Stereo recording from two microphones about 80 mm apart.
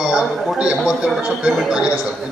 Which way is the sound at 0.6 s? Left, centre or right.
Centre.